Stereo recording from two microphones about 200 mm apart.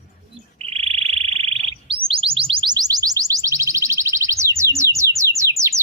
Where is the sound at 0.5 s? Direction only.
30° right (ahead or behind).